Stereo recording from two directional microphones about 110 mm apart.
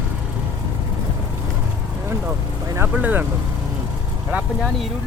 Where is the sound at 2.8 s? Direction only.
15° right (ahead or behind).